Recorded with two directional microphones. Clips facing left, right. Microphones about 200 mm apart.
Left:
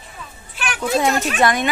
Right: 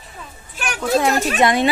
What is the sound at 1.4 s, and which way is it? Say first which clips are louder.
Speech: right 2 dB; 25° right (ahead or behind).